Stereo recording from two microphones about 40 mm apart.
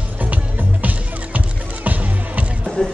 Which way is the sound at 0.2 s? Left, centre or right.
Right.